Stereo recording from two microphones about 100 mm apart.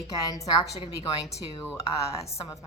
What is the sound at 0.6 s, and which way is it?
Speech, 60° left (ahead or behind).